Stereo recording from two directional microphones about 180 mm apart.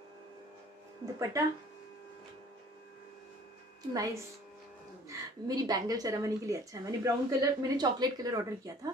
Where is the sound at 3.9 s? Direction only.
20° right (ahead or behind).